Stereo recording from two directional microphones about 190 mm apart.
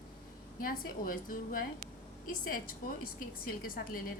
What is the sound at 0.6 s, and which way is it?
A woman's voice, 50° left (ahead or behind).